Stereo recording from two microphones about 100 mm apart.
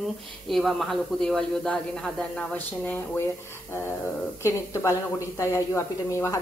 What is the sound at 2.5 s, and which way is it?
Speech, 15° left (ahead or behind).